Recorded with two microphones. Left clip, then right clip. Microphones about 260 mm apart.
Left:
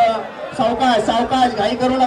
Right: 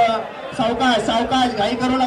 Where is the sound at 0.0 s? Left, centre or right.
Left.